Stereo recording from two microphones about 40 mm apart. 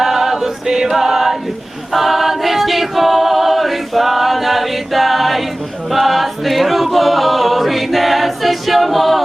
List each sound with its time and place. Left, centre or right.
0.0 s choir: centre
1.9 s a capella: centre
5.9 s choir: centre